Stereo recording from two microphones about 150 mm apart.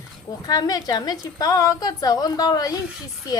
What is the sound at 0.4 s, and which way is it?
Speech, 25° left (ahead or behind).